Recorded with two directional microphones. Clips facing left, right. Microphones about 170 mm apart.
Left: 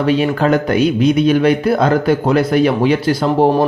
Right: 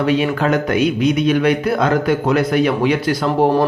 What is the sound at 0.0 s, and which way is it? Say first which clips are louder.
Speech: left 2 dB; 35° left (ahead or behind).